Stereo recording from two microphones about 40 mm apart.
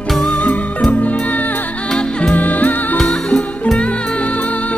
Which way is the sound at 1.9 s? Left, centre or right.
Left.